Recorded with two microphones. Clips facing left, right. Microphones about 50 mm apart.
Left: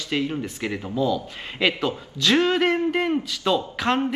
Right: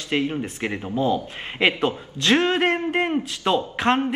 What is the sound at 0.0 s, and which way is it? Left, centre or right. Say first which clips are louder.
A man's voice: right 2 dB; right.